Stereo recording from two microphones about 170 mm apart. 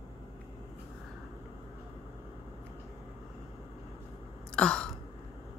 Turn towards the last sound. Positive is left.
turn(degrees=5)  # may be behind; listen again after turning